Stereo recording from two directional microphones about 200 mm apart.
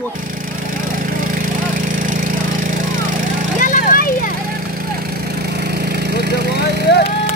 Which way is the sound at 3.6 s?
45° left (ahead or behind).